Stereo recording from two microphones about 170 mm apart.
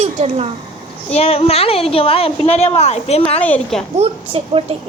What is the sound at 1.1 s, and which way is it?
A woman's voice, 35° left (ahead or behind).